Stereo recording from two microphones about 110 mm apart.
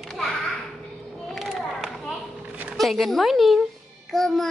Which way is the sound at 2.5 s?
10° right (ahead or behind).